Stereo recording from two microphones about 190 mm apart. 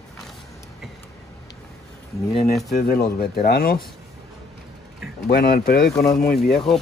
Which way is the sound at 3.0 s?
55° left (ahead or behind).